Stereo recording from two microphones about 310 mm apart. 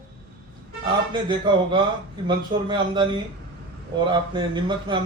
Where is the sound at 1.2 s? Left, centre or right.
Centre.